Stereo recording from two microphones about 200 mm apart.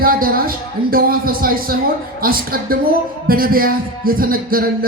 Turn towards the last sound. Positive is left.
turn(degrees=-45)  # may be behind; listen again after turning